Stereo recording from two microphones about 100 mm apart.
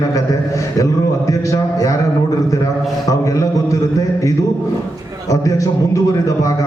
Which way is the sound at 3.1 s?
35° left (ahead or behind).